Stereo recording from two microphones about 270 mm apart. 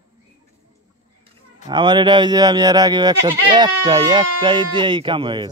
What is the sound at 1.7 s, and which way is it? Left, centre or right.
Speech, centre.